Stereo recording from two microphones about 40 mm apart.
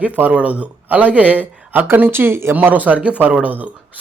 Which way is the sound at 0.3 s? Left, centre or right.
Right.